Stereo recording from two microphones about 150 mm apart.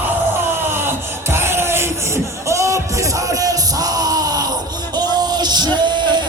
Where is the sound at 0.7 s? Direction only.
15° right (ahead or behind).